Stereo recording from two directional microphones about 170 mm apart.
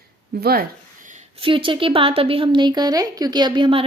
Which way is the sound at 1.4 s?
30° right (ahead or behind).